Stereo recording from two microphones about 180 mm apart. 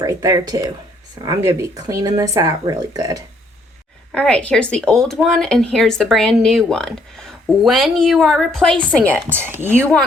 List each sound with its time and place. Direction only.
0.0 s speech: 20° right (ahead or behind)
4.1 s a woman's voice: 5° left (ahead or behind)
9.3 s speech: 10° right (ahead or behind)